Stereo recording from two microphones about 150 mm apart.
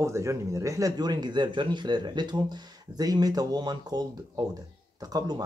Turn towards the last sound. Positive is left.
turn(degrees=-25)  # may be behind; listen again after turning